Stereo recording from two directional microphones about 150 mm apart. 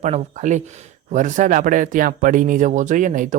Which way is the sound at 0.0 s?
50° right (ahead or behind).